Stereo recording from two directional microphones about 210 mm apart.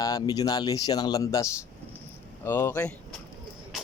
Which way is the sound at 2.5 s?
10° left (ahead or behind).